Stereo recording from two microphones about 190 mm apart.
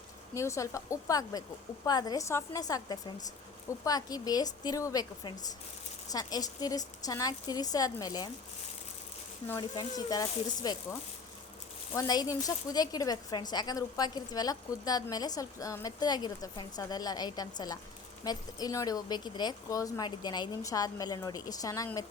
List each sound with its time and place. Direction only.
0.3 s a woman's voice: 15° left (ahead or behind)
9.5 s a woman's voice: 20° left (ahead or behind)
11.9 s a woman's voice: 20° left (ahead or behind)